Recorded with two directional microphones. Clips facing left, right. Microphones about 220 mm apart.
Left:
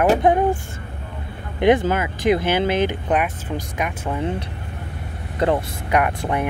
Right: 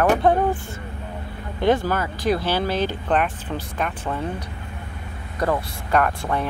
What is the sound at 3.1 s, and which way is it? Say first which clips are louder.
Speech: left 1 dB; 10° left (ahead or behind).